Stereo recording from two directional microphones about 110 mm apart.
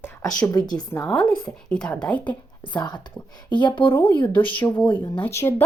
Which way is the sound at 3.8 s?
20° left (ahead or behind).